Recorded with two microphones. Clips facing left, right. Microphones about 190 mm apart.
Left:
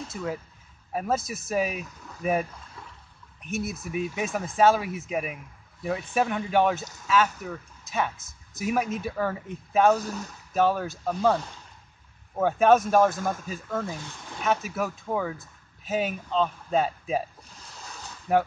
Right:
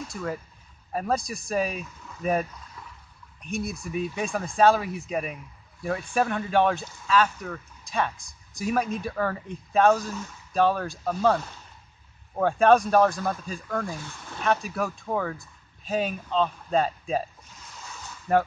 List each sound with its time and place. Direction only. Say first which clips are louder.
0.1 s speech: even; 5° left (ahead or behind)
3.4 s speech: even; 5° left (ahead or behind)
6.2 s speech: even; 15° left (ahead or behind)
6.8 s speech: even; 40° left (ahead or behind)
7.4 s speech: even; 5° left (ahead or behind)
13.8 s speech: even; 20° left (ahead or behind)
14.4 s speech: right 1 dB; 5° left (ahead or behind)
18.3 s speech: even; 10° left (ahead or behind)